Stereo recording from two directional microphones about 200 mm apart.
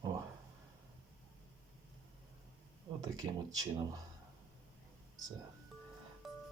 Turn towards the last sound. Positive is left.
turn(degrees=0)  # may be behind; listen again after turning